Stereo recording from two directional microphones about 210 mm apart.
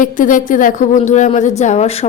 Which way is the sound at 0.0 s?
40° left (ahead or behind).